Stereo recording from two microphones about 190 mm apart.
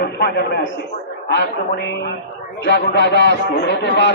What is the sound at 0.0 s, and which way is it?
A man's voice, 60° left (ahead or behind).